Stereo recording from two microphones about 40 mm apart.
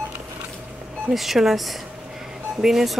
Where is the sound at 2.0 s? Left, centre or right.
Centre.